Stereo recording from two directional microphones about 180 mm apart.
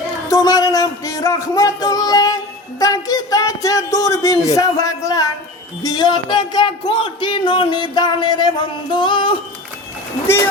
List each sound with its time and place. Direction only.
0.3 s speech: 20° left (ahead or behind)